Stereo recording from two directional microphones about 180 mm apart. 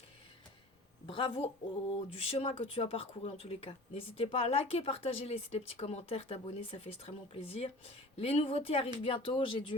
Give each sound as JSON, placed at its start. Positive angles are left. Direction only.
{"t": 1.0, "sound": "a woman's voice", "side_deg": 30}